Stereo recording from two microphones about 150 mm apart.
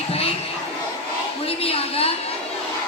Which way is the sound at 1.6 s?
40° left (ahead or behind).